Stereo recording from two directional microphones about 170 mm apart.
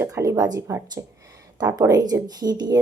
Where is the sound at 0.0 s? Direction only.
20° right (ahead or behind).